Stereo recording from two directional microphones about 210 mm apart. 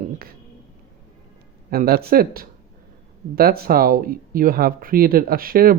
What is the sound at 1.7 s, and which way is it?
Speech, 45° right (ahead or behind).